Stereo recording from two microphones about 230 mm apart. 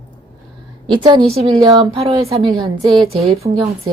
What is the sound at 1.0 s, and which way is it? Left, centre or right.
A woman's voice, centre.